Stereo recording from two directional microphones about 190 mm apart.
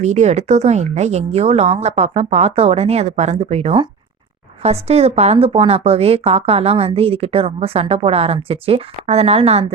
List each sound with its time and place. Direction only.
0.0 s a woman's voice: 35° right (ahead or behind)